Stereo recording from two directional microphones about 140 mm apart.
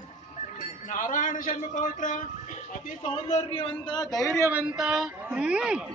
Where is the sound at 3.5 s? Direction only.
35° left (ahead or behind).